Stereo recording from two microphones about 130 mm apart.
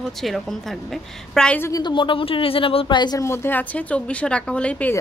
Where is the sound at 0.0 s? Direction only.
Centre (ahead or behind).